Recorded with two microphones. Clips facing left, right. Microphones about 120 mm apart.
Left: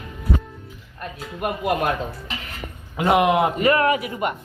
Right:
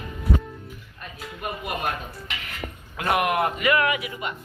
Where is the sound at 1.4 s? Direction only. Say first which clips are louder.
Left 7 dB; 80° left.